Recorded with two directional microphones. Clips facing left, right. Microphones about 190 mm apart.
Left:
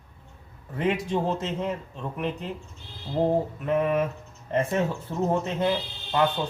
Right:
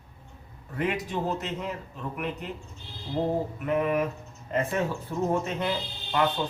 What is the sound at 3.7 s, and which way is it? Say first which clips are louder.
A man's voice: left 2 dB; 25° left (ahead or behind).